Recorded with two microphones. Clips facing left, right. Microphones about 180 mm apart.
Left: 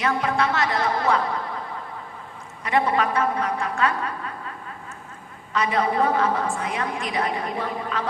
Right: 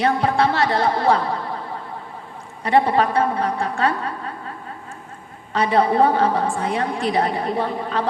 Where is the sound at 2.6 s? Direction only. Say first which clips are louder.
Right 5 dB; 30° right (ahead or behind).